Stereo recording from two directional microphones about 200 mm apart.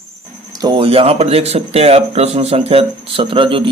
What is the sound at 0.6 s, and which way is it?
Speech, 25° right (ahead or behind).